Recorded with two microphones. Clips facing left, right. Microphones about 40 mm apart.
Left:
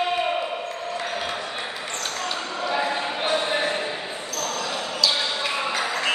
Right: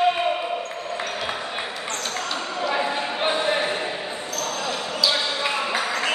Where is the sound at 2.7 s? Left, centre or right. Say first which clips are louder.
Left 1 dB; centre.